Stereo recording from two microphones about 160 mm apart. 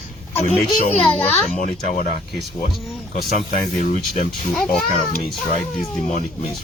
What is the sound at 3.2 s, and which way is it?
Speech, 65° left (ahead or behind).